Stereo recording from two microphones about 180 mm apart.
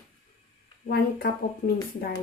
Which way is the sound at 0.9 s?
60° left (ahead or behind).